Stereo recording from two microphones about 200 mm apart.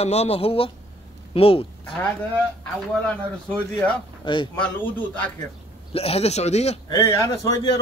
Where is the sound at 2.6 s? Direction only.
5° left (ahead or behind).